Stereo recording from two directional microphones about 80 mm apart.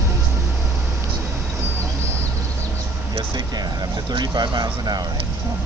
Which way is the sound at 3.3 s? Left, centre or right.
Right.